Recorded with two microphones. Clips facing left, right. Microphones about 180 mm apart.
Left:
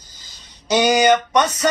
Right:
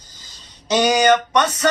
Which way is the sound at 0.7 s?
10° left (ahead or behind).